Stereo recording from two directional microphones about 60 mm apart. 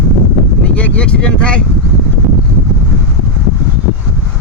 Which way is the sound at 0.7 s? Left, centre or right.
Left.